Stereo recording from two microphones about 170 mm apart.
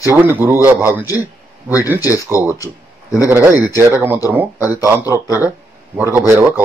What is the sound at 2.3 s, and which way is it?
Speech, 15° right (ahead or behind).